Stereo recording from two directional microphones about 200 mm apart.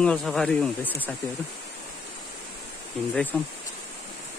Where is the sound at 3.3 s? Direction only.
10° left (ahead or behind).